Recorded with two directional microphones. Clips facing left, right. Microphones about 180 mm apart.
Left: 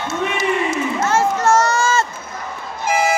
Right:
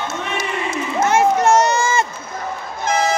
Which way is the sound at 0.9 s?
15° right (ahead or behind).